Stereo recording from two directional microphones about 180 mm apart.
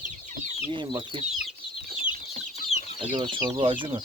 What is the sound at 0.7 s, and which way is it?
Speech, 25° right (ahead or behind).